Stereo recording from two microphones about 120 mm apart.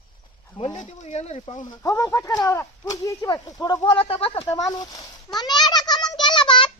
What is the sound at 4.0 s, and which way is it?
Speech, 55° left (ahead or behind).